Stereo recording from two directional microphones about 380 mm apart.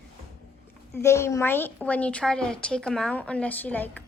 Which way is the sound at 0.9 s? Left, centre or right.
Centre.